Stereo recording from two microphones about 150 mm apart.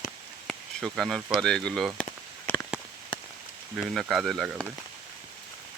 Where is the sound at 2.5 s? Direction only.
15° left (ahead or behind).